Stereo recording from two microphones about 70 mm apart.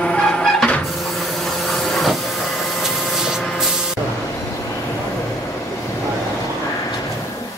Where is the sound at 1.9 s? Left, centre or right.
Centre.